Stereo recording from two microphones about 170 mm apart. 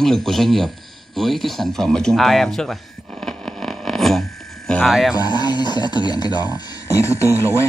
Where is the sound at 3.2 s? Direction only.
Centre (ahead or behind).